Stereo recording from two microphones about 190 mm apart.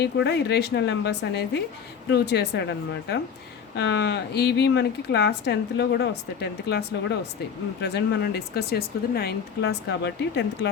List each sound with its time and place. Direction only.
0.0 s speech: 60° left (ahead or behind)